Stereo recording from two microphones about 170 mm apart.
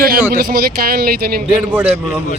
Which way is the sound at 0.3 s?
60° right (ahead or behind).